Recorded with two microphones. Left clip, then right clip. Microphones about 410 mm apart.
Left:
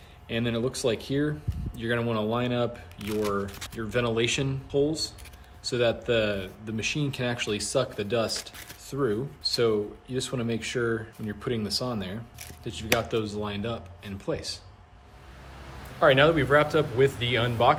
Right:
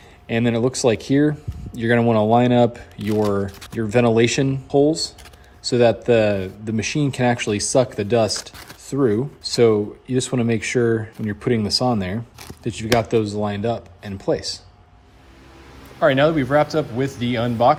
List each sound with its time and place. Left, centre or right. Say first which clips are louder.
0.3 s speech: right 9 dB; centre
16.0 s speech: right 4 dB; centre